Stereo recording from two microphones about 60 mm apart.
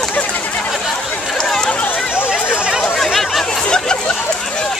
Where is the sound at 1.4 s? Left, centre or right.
Centre.